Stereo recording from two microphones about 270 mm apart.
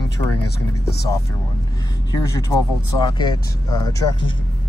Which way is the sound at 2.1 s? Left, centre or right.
Centre.